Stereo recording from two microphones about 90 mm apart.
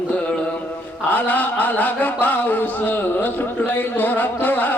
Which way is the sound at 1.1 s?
20° left (ahead or behind).